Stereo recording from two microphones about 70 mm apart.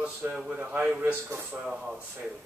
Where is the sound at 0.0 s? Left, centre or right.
Centre.